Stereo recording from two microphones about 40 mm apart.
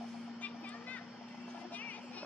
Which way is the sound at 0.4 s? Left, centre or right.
Left.